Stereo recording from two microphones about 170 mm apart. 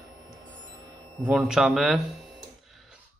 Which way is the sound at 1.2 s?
5° right (ahead or behind).